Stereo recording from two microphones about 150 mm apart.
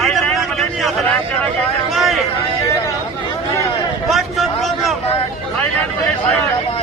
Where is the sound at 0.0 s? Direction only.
Centre (ahead or behind).